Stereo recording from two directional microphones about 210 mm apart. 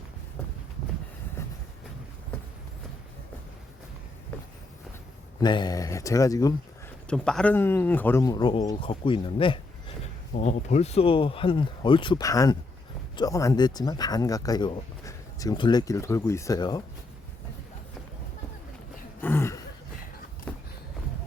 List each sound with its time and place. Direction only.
1.4 s train: 10° left (ahead or behind)
5.4 s speech: 20° left (ahead or behind)
7.1 s speech: 5° left (ahead or behind); by 16.8 s 20° left (ahead or behind)
19.2 s a sound: 10° left (ahead or behind)